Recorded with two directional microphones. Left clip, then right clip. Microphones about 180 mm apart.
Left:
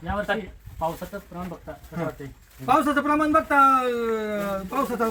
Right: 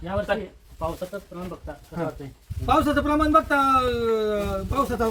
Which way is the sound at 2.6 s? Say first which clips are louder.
Even; centre (ahead or behind).